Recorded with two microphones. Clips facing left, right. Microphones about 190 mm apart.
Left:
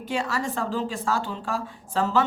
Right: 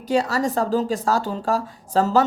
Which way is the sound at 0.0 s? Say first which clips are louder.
Right 7 dB; 40° right (ahead or behind).